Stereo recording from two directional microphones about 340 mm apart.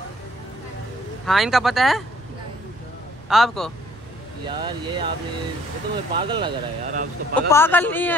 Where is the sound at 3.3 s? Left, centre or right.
Centre.